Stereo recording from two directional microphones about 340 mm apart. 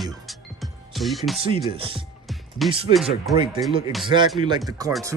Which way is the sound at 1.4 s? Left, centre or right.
Centre.